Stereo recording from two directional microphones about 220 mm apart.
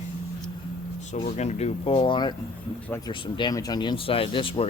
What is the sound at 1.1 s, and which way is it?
Speech, 30° left (ahead or behind).